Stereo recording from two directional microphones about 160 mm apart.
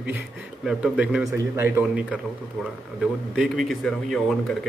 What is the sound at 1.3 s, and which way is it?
Speech, 15° right (ahead or behind).